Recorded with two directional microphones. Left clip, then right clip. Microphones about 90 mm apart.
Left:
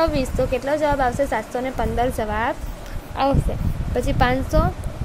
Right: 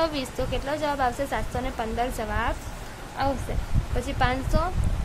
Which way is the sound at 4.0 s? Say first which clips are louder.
Left 6 dB; 55° left (ahead or behind).